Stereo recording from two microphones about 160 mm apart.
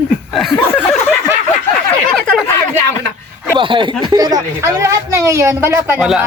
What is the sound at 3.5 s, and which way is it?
A woman's voice, 30° right (ahead or behind).